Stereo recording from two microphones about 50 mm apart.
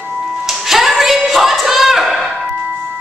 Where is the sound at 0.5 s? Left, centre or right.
Centre.